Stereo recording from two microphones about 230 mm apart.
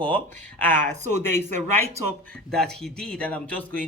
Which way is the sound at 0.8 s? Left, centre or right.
Right.